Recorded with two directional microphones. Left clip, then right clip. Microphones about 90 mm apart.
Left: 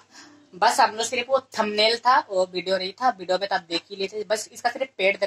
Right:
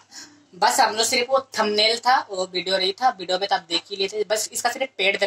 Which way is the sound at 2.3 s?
55° right (ahead or behind).